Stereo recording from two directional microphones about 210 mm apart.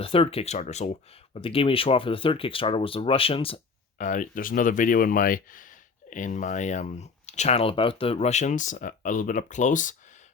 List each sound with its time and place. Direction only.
0.0 s speech: 25° left (ahead or behind)